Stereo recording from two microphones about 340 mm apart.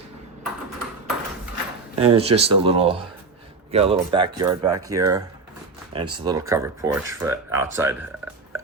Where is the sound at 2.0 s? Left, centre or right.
Centre.